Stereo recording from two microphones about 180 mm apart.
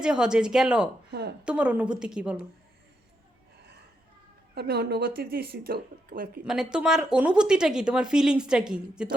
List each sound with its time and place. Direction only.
0.0 s a woman's voice: 5° right (ahead or behind)
4.5 s speech: 65° right (ahead or behind)
6.4 s speech: 5° right (ahead or behind)